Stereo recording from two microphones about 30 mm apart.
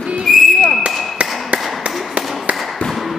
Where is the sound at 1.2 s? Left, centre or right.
Right.